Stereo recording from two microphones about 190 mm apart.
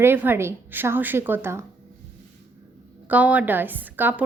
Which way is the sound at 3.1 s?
10° right (ahead or behind).